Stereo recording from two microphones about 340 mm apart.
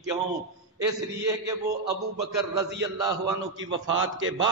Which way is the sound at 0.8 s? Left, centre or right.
Centre.